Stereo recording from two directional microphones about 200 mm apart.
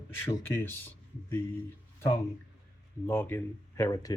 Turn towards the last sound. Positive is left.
turn(degrees=15)  # may be behind; listen again after turning